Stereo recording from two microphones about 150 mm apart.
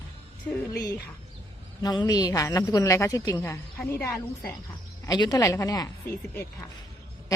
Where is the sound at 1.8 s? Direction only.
25° left (ahead or behind).